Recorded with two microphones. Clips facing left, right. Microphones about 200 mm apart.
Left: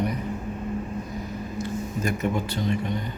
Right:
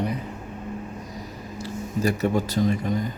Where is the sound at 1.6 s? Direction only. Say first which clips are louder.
Right 4 dB; 35° right (ahead or behind).